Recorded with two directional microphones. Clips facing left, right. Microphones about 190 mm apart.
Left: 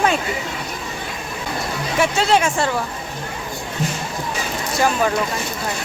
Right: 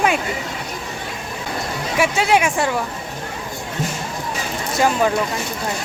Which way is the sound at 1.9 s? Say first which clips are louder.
Even; 10° right (ahead or behind).